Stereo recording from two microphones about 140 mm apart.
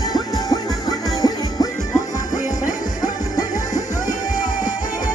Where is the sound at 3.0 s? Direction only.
25° left (ahead or behind).